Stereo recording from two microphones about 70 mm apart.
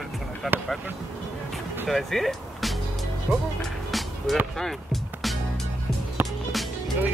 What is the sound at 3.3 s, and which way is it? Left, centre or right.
Speech, right.